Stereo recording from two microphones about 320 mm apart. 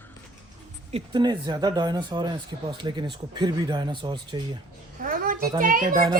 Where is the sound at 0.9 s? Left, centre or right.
Centre.